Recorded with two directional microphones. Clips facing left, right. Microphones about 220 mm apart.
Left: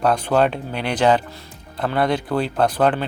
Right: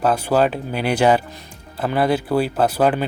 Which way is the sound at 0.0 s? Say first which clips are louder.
Even; 5° right (ahead or behind).